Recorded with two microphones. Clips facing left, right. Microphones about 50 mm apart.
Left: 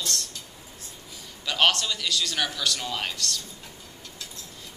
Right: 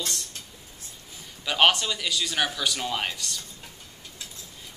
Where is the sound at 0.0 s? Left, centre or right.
Centre.